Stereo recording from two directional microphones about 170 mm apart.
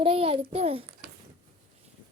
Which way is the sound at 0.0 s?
35° right (ahead or behind).